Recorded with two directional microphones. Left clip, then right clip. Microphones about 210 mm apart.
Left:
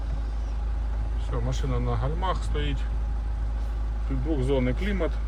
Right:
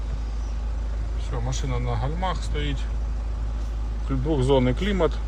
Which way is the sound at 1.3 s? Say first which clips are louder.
Right 1 dB; centre (ahead or behind).